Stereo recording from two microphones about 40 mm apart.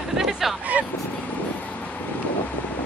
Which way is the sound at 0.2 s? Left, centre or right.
Centre.